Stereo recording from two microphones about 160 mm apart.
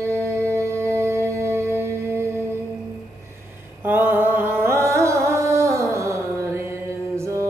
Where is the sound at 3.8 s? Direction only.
10° right (ahead or behind).